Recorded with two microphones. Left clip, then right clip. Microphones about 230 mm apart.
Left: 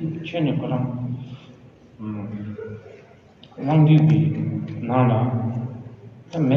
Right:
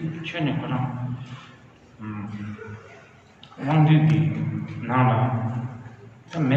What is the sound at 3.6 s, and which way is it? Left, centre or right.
A man's voice, right.